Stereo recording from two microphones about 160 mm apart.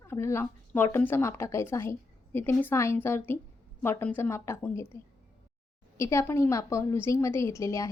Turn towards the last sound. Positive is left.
turn(degrees=20)  # may be behind; listen again after turning